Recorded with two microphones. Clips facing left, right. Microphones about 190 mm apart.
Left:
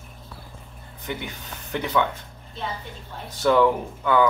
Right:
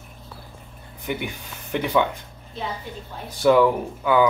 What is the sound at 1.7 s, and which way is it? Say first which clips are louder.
Speech: right 3 dB; 10° right (ahead or behind).